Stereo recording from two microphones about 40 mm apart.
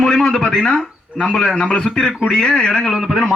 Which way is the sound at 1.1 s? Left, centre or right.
Right.